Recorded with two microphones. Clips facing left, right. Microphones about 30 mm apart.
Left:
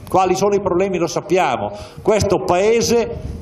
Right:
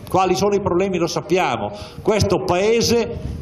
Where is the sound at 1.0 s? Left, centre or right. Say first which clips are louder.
Left 1 dB; right.